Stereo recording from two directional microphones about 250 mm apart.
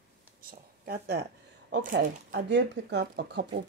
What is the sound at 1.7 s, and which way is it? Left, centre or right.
Speech, right.